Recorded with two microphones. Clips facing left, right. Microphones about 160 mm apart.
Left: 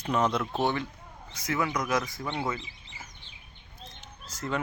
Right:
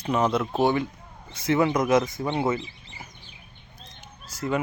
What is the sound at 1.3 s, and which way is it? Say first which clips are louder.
Speech: right 8 dB; 25° right (ahead or behind).